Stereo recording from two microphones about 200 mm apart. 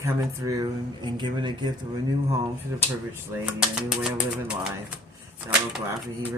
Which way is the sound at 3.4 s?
5° right (ahead or behind).